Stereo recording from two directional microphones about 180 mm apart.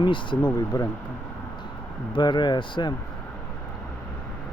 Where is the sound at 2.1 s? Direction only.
25° left (ahead or behind).